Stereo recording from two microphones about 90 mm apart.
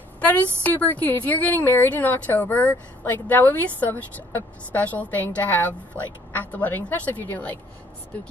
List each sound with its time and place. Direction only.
0.2 s a woman's voice: 20° left (ahead or behind)